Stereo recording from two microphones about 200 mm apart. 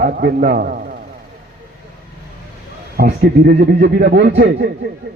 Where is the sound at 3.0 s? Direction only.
50° right (ahead or behind).